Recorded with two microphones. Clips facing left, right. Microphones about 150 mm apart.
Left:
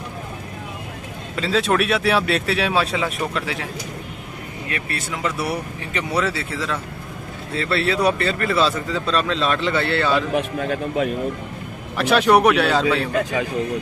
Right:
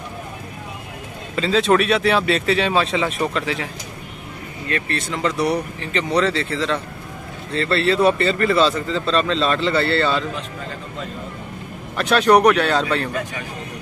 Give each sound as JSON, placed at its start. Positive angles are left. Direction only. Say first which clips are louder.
{"t": 1.3, "sound": "speech", "louder": "right 3 dB", "side_deg": 0}
{"t": 4.6, "sound": "speech", "louder": "right 5 dB", "side_deg": 10}
{"t": 10.3, "sound": "a man's voice", "louder": "left 9 dB", "side_deg": 70}
{"t": 12.0, "sound": "speech", "louder": "right 1 dB", "side_deg": 5}